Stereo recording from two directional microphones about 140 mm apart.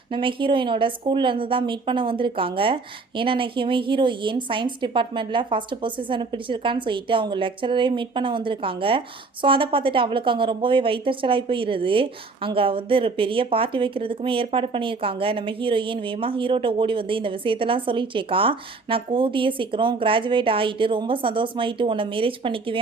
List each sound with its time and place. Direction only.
0.1 s a woman's voice: 35° right (ahead or behind)